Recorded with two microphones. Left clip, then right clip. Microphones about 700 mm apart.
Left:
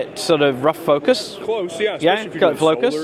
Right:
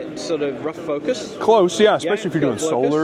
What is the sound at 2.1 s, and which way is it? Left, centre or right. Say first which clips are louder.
Speech: left 4 dB; left.